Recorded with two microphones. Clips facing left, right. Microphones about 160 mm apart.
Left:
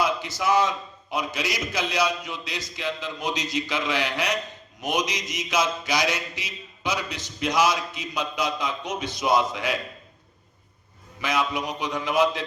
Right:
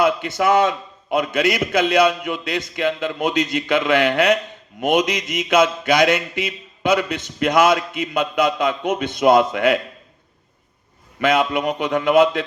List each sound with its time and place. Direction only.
0.0 s mantra: 55° right (ahead or behind)
11.2 s mantra: 55° right (ahead or behind)